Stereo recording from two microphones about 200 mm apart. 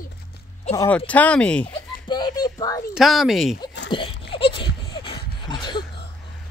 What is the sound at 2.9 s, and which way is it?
Speech, centre (ahead or behind).